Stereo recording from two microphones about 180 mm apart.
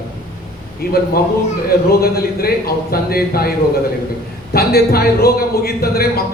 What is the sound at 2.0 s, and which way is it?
A man's voice, 60° left (ahead or behind).